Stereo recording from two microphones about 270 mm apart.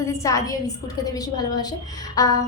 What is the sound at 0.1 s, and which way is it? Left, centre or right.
A woman's voice, centre.